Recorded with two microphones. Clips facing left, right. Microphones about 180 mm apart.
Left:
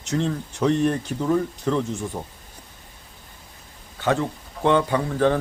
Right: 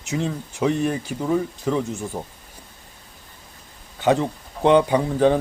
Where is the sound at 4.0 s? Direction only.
15° right (ahead or behind).